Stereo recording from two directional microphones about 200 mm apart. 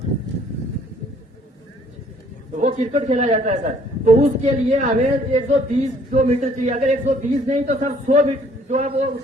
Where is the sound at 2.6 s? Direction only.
35° right (ahead or behind).